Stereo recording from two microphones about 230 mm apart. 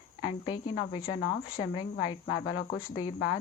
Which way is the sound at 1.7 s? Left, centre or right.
Left.